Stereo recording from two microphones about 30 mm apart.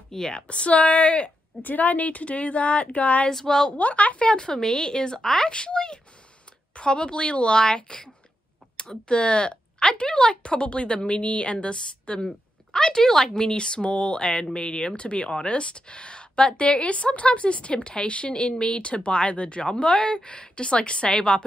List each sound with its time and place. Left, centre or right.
0.1 s speech: centre
0.5 s speech: left
1.6 s speech: left
3.3 s speech: left
3.7 s speech: left
4.2 s speech: left; by 5.5 s centre
5.5 s speech: left
16.6 s speech: left
18.8 s speech: left